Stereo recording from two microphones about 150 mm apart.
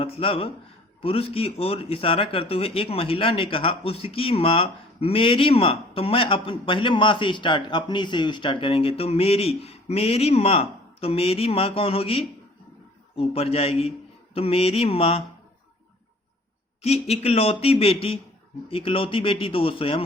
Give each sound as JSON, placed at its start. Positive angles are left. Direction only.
{"t": 0.0, "sound": "speech", "side_deg": 40}
{"t": 16.8, "sound": "speech", "side_deg": 45}